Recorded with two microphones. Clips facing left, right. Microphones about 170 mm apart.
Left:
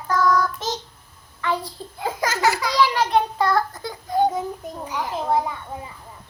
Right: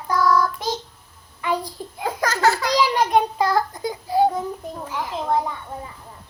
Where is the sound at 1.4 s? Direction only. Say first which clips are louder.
Right 1 dB; 15° right (ahead or behind).